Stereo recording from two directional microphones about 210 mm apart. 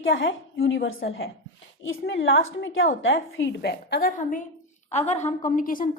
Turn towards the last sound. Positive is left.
turn(degrees=40)  # may be behind; listen again after turning